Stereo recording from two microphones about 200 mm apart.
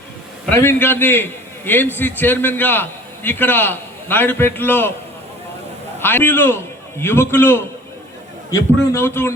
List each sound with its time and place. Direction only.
0.5 s a man's voice: 10° left (ahead or behind)
6.0 s a man's voice: 10° left (ahead or behind)